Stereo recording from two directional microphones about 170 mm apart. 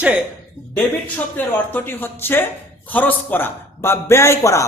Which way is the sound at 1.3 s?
10° left (ahead or behind).